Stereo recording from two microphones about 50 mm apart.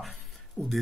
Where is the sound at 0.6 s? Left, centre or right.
Right.